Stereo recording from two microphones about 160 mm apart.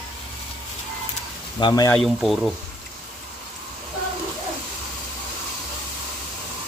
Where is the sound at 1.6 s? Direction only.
30° left (ahead or behind).